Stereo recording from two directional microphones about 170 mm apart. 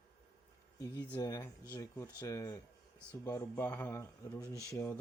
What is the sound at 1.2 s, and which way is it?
Speech, 20° left (ahead or behind).